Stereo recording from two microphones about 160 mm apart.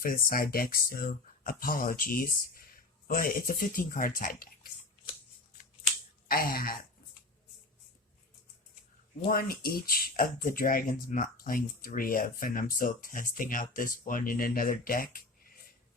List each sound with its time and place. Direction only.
0.0 s speech: 65° left (ahead or behind)
6.2 s a sound: 65° left (ahead or behind)
9.3 s speech: 65° left (ahead or behind)